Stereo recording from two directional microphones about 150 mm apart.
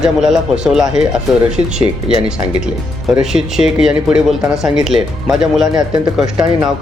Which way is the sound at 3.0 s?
Centre (ahead or behind).